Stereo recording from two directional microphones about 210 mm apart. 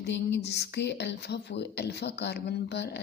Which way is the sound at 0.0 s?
55° left (ahead or behind).